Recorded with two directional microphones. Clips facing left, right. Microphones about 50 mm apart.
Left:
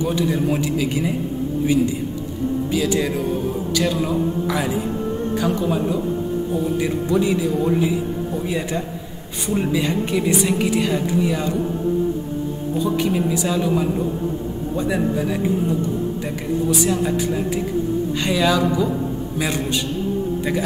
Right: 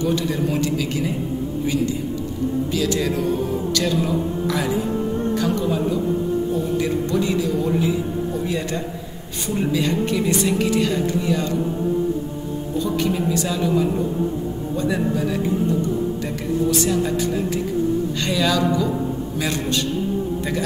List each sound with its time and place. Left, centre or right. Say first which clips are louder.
0.0 s a woman's voice: left 1 dB; centre
12.7 s a woman's voice: left 2 dB; centre
16.7 s a woman's voice: even; centre